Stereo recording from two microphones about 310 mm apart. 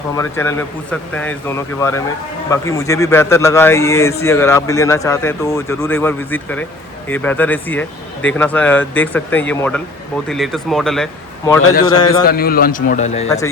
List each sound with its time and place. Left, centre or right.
0.2 s a man's voice: centre
11.9 s a man's voice: left
12.2 s a man's voice: left
13.2 s a man's voice: centre